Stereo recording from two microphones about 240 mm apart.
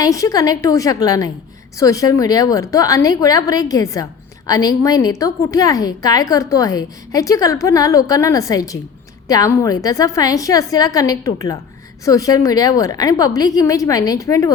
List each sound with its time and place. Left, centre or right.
0.0 s a woman's voice: centre